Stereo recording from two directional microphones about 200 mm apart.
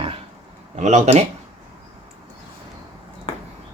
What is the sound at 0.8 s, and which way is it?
Speech, 35° right (ahead or behind).